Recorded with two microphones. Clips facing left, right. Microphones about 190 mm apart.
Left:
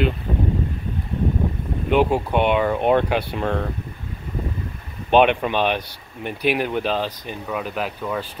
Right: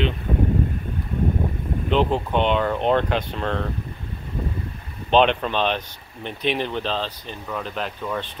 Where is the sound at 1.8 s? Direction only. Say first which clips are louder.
Left 3 dB; 10° left (ahead or behind).